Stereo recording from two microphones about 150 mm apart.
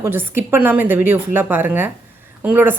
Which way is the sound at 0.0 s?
15° right (ahead or behind).